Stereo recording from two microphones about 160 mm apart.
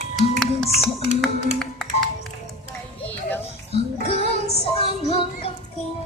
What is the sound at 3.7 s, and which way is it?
Music, 40° left (ahead or behind).